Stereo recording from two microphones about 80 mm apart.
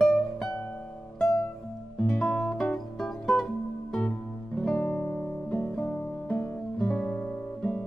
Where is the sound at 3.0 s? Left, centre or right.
Centre.